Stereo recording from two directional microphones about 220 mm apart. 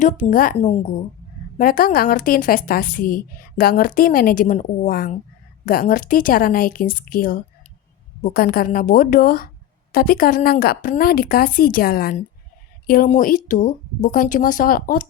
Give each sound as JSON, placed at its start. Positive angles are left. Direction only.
{"t": 0.0, "sound": "a woman's voice", "side_deg": 35}
{"t": 0.5, "sound": "a woman's voice", "side_deg": 30}
{"t": 1.5, "sound": "a woman's voice", "side_deg": 40}